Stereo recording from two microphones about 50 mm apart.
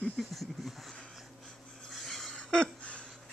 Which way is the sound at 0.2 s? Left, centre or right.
Centre.